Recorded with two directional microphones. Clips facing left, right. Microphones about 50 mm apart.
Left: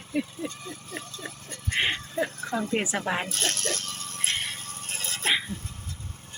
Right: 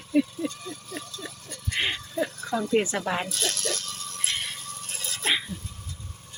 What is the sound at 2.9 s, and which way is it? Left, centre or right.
Speech, left.